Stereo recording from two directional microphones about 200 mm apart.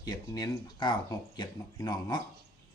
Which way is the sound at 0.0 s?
20° left (ahead or behind).